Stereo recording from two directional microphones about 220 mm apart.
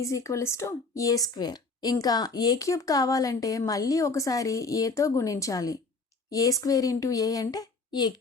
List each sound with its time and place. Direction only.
0.0 s a woman's voice: 15° left (ahead or behind)